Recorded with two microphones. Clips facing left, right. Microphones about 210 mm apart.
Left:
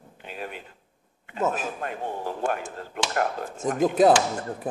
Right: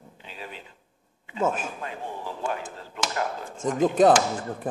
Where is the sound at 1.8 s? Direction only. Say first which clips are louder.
Left 4 dB; 55° left (ahead or behind).